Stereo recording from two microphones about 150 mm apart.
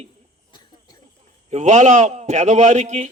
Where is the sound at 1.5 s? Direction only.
50° right (ahead or behind).